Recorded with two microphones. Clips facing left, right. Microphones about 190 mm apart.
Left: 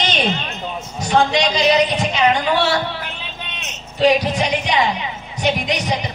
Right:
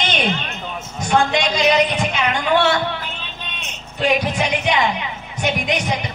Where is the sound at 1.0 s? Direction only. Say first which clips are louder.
Left 1 dB; 55° right (ahead or behind).